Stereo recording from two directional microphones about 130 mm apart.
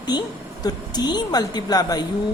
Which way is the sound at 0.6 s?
30° left (ahead or behind).